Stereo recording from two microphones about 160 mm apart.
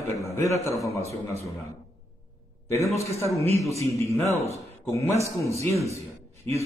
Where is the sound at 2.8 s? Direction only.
20° left (ahead or behind).